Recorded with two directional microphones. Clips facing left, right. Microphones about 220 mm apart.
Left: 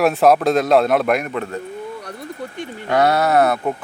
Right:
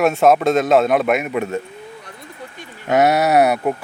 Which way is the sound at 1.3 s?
20° right (ahead or behind).